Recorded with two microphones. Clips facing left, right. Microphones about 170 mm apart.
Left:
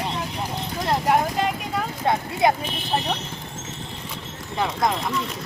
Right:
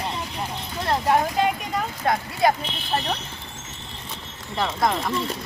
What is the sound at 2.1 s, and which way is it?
Speech, 20° left (ahead or behind).